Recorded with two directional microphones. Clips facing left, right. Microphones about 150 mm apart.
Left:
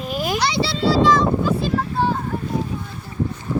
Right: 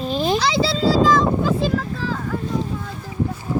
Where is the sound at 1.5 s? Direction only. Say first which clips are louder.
Right 1 dB; 90° right.